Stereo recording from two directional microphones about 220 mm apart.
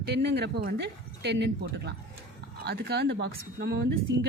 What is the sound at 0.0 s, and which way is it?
Speech, 50° right (ahead or behind).